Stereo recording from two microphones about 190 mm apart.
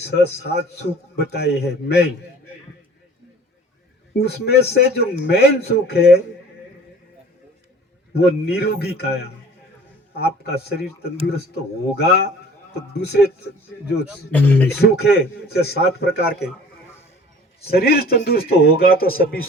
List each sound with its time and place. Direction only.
0.1 s a man's voice: 60° left (ahead or behind)
4.2 s a man's voice: 60° left (ahead or behind)
8.1 s a man's voice: 55° left (ahead or behind)
14.3 s speech: 10° left (ahead or behind)
14.8 s a man's voice: 60° left (ahead or behind)
17.6 s a man's voice: 55° left (ahead or behind)